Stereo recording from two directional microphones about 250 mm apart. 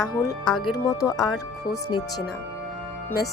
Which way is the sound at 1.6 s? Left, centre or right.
Centre.